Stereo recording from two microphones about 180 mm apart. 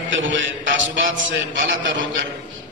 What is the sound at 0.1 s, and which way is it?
A man's voice, 90° right.